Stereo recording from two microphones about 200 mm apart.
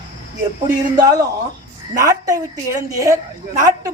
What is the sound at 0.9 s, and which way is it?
A man's voice, 20° right (ahead or behind).